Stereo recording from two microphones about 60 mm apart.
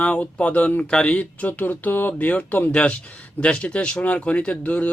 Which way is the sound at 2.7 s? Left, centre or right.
Centre.